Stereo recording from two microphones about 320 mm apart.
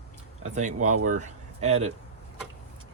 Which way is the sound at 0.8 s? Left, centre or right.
Right.